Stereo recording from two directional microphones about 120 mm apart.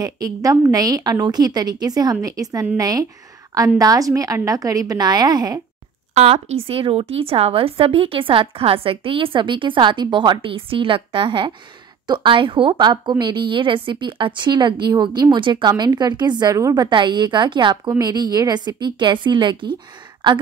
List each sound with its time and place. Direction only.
0.0 s a woman's voice: 30° right (ahead or behind)
6.1 s a woman's voice: 60° right (ahead or behind); by 20.3 s 40° right (ahead or behind)